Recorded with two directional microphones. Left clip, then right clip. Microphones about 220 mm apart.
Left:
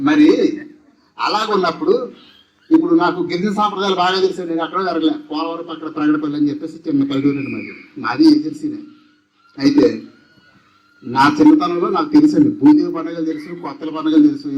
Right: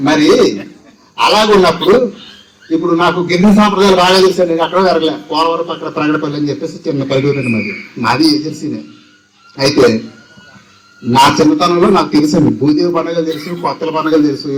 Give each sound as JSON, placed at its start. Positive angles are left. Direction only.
{"t": 0.0, "sound": "a man's voice", "side_deg": 45}
{"t": 2.8, "sound": "a man's voice", "side_deg": 50}
{"t": 11.1, "sound": "a man's voice", "side_deg": 50}